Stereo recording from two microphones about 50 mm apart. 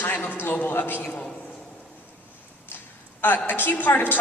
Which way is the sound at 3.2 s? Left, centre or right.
Left.